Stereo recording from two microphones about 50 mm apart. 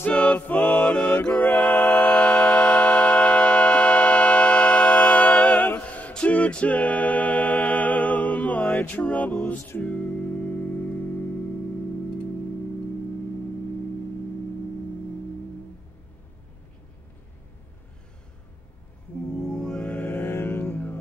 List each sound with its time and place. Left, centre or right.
0.0 s music: left
6.1 s a capella: left
9.8 s music: left
19.5 s music: centre
19.9 s music: left